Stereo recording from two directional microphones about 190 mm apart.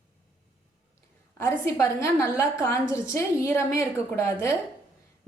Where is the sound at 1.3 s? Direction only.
15° left (ahead or behind).